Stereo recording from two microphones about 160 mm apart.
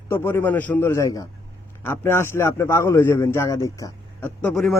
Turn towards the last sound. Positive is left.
turn(degrees=5)  # may be behind; listen again after turning